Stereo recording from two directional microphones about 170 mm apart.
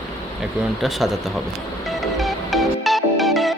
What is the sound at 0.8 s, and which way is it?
Speech, centre (ahead or behind).